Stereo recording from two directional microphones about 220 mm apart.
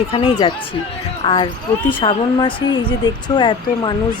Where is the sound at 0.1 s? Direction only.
25° left (ahead or behind).